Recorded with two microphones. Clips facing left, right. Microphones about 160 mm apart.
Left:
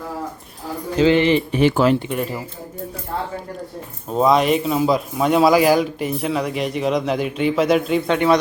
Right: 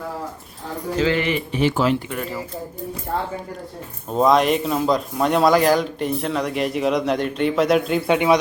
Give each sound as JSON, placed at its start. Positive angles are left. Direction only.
{"t": 0.9, "sound": "speech", "side_deg": 20}
{"t": 1.5, "sound": "speech", "side_deg": 55}
{"t": 2.0, "sound": "speech", "side_deg": 20}
{"t": 4.1, "sound": "speech", "side_deg": 0}
{"t": 8.0, "sound": "a man's voice", "side_deg": -15}